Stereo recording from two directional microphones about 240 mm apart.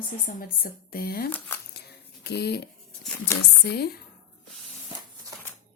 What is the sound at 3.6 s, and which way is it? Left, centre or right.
Speech, left.